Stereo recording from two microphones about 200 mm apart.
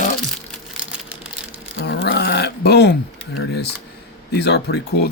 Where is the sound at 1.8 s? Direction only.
60° left (ahead or behind).